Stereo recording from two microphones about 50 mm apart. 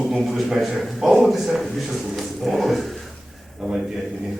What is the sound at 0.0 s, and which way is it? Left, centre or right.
Speech, centre.